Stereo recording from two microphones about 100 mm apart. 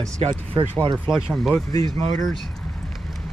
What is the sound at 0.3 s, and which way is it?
Speech, 40° right (ahead or behind).